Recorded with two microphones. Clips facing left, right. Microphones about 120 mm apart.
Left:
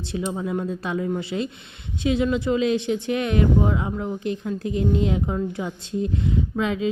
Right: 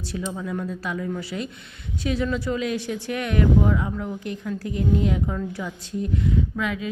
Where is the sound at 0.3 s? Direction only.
25° left (ahead or behind).